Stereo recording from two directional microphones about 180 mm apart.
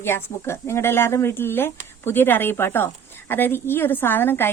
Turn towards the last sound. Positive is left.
turn(degrees=10)  # may be behind; listen again after turning